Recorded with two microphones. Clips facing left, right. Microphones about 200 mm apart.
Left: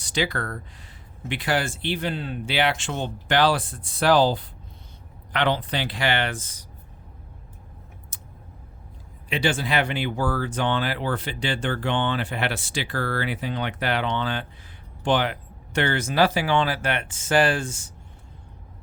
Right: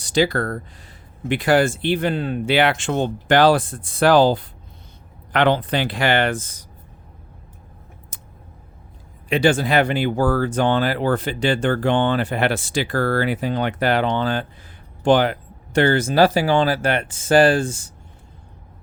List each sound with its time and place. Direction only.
0.0 s speech: 40° right (ahead or behind)
8.1 s a sound: 55° right (ahead or behind)
9.3 s speech: 45° right (ahead or behind)